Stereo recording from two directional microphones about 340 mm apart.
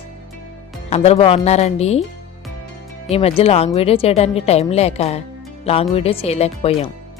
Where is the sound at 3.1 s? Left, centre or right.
Centre.